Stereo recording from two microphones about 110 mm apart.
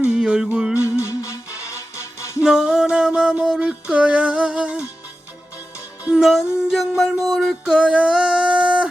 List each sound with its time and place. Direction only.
0.0 s music: 10° right (ahead or behind)
0.8 s music: 25° left (ahead or behind)
2.4 s music: 5° right (ahead or behind)
6.1 s music: 5° right (ahead or behind)